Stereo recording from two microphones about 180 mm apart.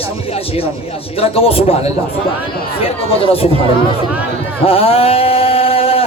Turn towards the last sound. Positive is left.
turn(degrees=30)  # may be behind; listen again after turning